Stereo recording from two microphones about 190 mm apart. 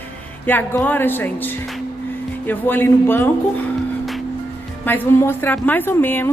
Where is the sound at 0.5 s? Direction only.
10° left (ahead or behind).